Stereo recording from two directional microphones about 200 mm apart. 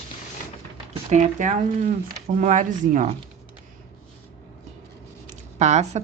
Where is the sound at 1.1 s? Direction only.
40° right (ahead or behind).